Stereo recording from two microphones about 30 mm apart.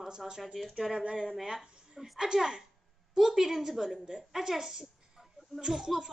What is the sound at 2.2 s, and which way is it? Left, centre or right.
A woman's voice, right.